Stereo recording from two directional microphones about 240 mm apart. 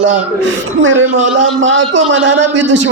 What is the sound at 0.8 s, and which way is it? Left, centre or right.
A woman's voice, right.